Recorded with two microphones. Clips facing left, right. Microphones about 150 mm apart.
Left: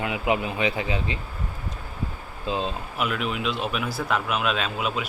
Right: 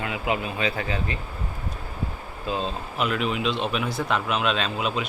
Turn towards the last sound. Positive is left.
turn(degrees=5)  # may be behind; listen again after turning